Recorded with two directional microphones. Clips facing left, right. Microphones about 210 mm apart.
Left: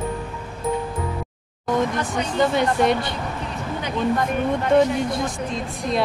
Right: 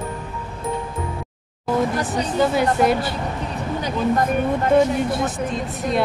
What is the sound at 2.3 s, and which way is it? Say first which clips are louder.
Music: right 1 dB; 5° right (ahead or behind).